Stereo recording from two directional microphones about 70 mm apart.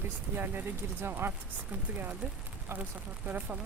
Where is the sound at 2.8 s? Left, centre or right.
Right.